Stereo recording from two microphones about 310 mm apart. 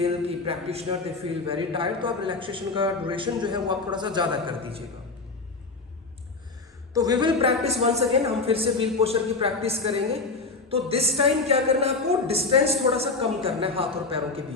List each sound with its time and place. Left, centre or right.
0.0 s a man's voice: centre
6.9 s speech: centre